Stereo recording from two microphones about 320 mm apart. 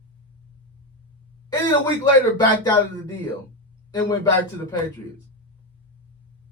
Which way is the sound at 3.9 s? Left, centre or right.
Centre.